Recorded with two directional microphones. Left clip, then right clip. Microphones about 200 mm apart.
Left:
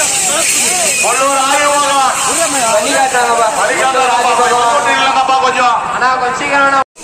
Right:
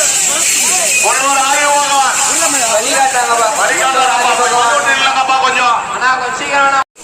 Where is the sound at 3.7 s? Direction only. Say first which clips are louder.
Even; 25° left (ahead or behind).